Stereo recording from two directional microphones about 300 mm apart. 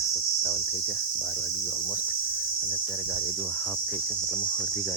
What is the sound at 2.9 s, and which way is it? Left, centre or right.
Speech, centre.